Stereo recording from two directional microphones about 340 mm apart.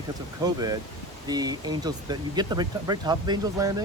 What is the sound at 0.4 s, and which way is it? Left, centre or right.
Speech, centre.